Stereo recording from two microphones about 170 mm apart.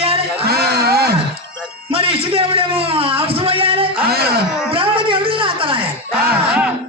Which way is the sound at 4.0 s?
65° right (ahead or behind).